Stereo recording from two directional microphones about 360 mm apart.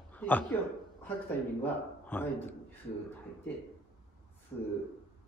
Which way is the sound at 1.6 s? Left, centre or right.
Centre.